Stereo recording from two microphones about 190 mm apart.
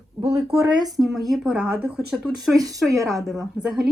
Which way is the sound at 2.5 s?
20° right (ahead or behind).